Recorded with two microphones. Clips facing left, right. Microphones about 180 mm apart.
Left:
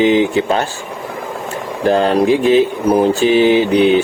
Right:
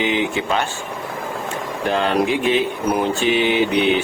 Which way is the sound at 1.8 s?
40° left (ahead or behind).